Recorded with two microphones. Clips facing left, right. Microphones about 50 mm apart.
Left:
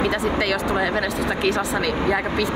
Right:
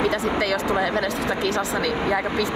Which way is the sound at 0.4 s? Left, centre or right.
Left.